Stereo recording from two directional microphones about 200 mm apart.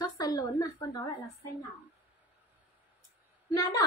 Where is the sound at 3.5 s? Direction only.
20° left (ahead or behind).